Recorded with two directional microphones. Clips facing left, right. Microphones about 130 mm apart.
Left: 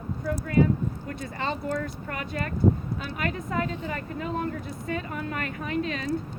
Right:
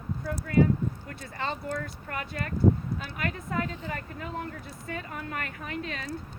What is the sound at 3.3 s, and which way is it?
Speech, 25° left (ahead or behind).